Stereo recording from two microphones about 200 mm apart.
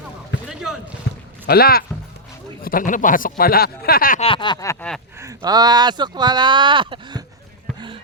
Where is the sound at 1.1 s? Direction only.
55° left (ahead or behind).